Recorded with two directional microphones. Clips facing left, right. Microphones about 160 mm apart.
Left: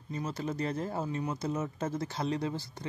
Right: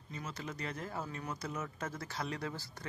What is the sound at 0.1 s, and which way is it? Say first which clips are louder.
Speech: left 8 dB; 35° left (ahead or behind).